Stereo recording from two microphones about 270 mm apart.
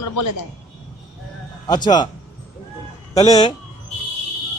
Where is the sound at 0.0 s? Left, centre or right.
Left.